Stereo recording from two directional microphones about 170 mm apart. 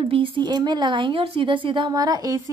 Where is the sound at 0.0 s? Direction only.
35° right (ahead or behind).